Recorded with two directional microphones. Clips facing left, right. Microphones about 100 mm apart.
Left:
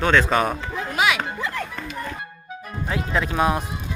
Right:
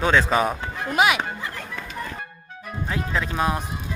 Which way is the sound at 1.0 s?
25° right (ahead or behind).